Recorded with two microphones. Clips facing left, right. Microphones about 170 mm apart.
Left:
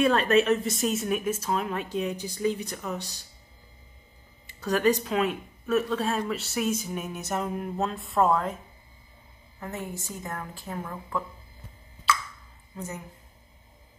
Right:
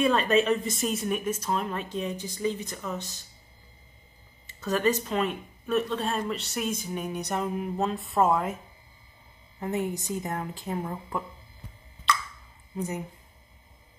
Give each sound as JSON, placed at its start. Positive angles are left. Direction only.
{"t": 0.0, "sound": "speech", "side_deg": 0}
{"t": 4.5, "sound": "speech", "side_deg": 10}
{"t": 9.6, "sound": "a woman's voice", "side_deg": -20}
{"t": 12.1, "sound": "plop", "side_deg": 5}
{"t": 12.7, "sound": "speech", "side_deg": -20}